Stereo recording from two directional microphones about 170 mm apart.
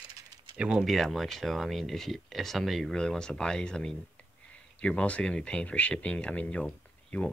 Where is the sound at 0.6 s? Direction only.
5° right (ahead or behind).